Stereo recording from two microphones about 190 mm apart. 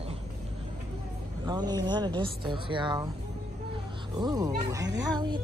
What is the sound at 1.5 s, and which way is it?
Speech, 20° right (ahead or behind).